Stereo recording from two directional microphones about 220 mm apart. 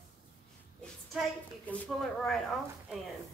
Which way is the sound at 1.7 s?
Centre (ahead or behind).